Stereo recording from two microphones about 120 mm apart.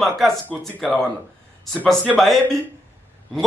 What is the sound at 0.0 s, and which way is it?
A man's voice, centre (ahead or behind).